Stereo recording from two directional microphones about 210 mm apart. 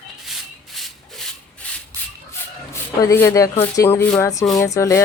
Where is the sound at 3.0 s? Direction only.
15° left (ahead or behind).